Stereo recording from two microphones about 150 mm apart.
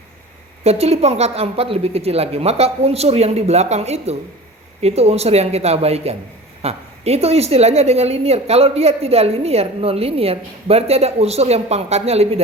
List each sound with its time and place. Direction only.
0.6 s a woman's voice: 45° right (ahead or behind)